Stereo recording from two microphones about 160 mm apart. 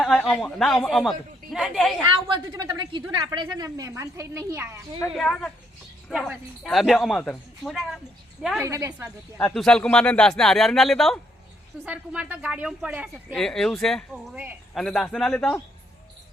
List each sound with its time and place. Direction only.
0.0 s speech: 5° left (ahead or behind)
2.2 s speech: 30° right (ahead or behind)
5.1 s speech: 5° left (ahead or behind)
8.6 s speech: 20° right (ahead or behind)
9.6 s speech: 5° left (ahead or behind)
13.3 s speech: 5° left (ahead or behind)